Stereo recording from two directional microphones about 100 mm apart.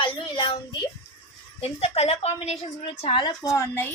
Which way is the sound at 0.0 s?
55° left (ahead or behind).